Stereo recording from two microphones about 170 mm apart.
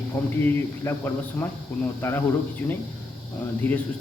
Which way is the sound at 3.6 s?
10° left (ahead or behind).